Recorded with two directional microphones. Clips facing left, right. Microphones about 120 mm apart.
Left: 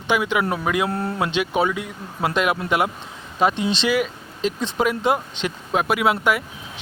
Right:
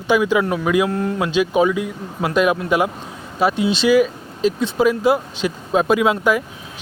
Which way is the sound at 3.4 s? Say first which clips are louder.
Right 2 dB; 25° left (ahead or behind).